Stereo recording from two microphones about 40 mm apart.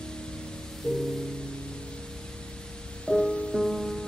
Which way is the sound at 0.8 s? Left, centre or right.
Centre.